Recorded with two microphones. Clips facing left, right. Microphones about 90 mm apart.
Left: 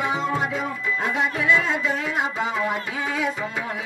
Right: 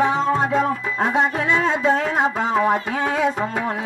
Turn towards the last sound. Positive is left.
turn(degrees=-45)  # may be behind; listen again after turning